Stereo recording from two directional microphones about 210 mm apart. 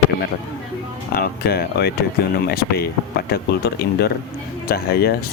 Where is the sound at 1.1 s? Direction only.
45° left (ahead or behind).